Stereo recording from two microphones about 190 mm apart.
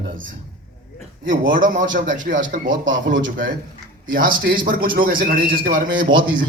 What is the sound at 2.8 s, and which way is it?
Speech, 75° right (ahead or behind).